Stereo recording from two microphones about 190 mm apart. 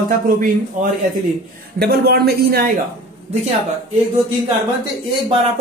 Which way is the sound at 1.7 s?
55° right (ahead or behind).